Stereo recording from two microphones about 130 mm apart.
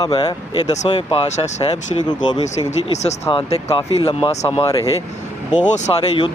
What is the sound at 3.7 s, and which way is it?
Speech, 35° left (ahead or behind).